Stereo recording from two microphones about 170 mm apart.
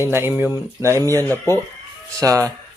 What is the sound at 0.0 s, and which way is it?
Speech, 15° right (ahead or behind).